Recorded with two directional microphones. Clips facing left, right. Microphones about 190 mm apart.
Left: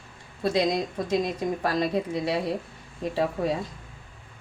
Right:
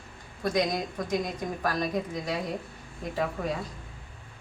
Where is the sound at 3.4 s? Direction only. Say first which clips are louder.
Left 5 dB; 30° left (ahead or behind).